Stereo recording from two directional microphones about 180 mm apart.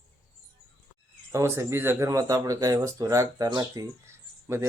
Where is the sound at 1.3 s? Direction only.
15° right (ahead or behind).